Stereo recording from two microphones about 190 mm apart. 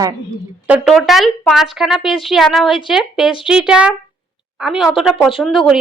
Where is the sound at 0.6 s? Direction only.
5° right (ahead or behind).